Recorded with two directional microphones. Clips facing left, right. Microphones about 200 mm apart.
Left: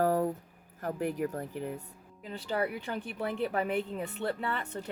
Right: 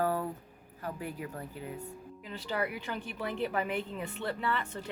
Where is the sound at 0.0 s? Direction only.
40° left (ahead or behind).